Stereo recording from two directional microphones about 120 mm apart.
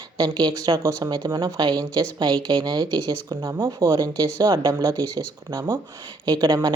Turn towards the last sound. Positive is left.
turn(degrees=-35)  # may be behind; listen again after turning